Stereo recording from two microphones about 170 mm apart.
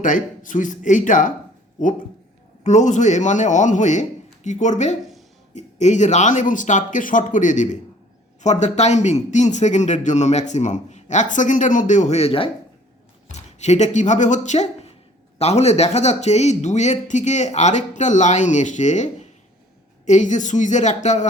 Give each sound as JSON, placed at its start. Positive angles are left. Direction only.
{"t": 0.0, "sound": "a man's voice", "side_deg": 50}